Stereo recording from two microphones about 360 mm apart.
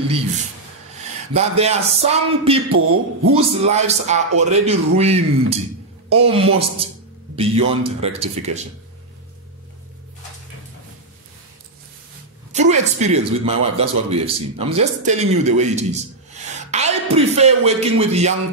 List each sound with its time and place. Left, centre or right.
1.3 s speech: centre
2.7 s a man's voice: right
3.3 s speech: centre
12.5 s speech: centre